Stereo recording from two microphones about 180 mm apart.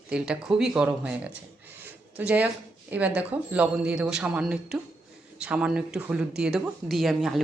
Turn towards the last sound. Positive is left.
turn(degrees=0)  # may be behind; listen again after turning